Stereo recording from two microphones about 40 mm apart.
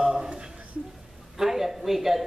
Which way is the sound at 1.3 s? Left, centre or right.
Centre.